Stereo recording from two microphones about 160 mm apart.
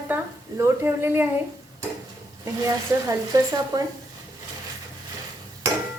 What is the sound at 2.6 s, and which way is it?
Speech, 25° right (ahead or behind).